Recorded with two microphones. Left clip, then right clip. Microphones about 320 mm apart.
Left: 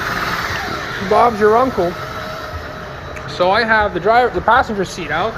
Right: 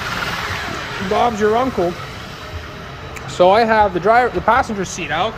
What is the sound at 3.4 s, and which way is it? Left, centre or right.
Speech, right.